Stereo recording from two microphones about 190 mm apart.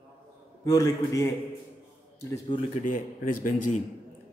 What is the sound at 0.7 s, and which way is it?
Speech, 20° left (ahead or behind).